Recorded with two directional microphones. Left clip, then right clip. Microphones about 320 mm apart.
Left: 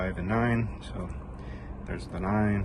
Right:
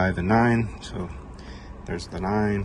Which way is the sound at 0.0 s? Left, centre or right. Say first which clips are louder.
Right 8 dB; centre.